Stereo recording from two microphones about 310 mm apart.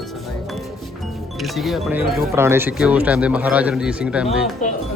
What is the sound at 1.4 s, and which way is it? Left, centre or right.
Speech, centre.